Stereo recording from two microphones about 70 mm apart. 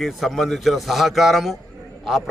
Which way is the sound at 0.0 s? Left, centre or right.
Centre.